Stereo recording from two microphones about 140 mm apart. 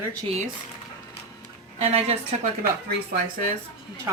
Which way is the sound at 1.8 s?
45° right (ahead or behind).